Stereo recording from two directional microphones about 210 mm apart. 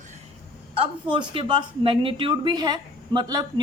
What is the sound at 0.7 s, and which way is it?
Speech, 25° right (ahead or behind).